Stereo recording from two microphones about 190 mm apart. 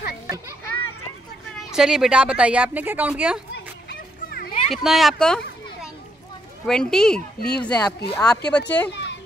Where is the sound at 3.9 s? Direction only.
55° left (ahead or behind).